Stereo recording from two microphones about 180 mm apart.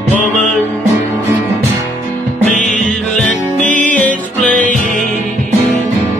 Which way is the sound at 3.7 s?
45° left (ahead or behind).